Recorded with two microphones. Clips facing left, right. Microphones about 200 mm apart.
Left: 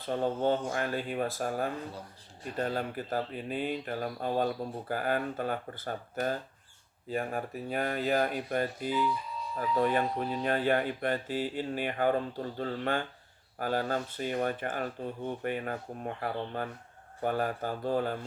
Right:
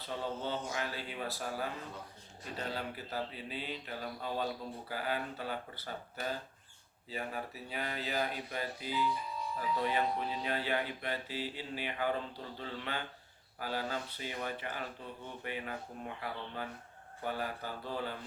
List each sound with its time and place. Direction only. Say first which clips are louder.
0.0 s speech: left 9 dB; 50° left (ahead or behind)